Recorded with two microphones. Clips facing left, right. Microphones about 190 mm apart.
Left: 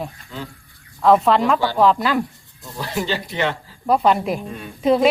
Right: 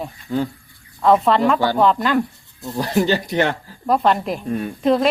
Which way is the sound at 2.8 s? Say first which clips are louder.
Right 6 dB; 45° right (ahead or behind).